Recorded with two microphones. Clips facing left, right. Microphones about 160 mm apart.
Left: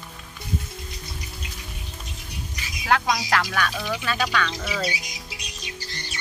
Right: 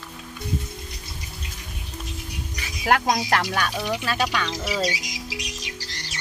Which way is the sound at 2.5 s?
50° right (ahead or behind).